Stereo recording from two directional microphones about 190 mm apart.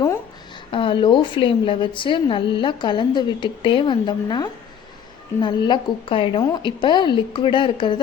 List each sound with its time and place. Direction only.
0.7 s a woman's voice: 25° left (ahead or behind)